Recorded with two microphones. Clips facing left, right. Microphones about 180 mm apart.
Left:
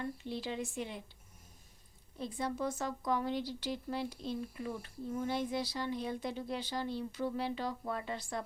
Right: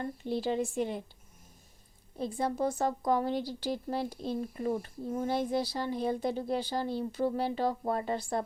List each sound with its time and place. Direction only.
0.0 s speech: 45° right (ahead or behind)
2.1 s a woman's voice: 40° right (ahead or behind)